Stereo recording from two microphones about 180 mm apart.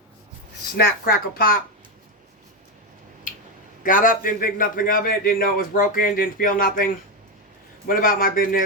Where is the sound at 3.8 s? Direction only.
50° left (ahead or behind).